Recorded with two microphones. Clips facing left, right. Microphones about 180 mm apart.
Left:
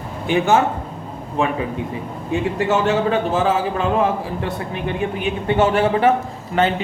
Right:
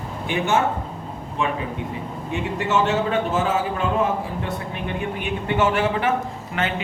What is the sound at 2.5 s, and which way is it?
Speech, 35° left (ahead or behind).